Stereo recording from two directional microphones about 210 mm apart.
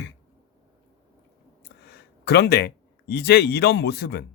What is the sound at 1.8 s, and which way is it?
Speech, 50° left (ahead or behind).